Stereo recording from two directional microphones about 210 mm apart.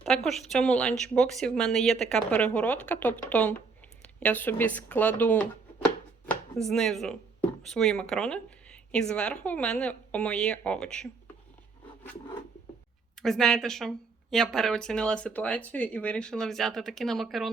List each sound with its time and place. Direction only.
0.0 s speech: centre (ahead or behind)
13.2 s speech: centre (ahead or behind)